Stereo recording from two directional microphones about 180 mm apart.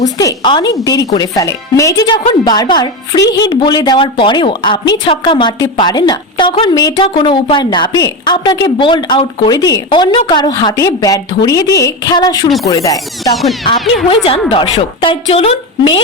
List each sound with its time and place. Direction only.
0.2 s a woman's voice: 20° left (ahead or behind)
13.3 s music: centre (ahead or behind)
14.5 s a woman's voice: 30° left (ahead or behind)